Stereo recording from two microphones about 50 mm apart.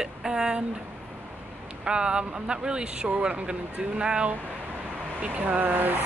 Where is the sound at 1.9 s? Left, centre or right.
Centre.